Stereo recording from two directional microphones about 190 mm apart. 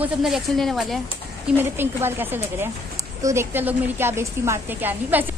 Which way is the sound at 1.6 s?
10° right (ahead or behind).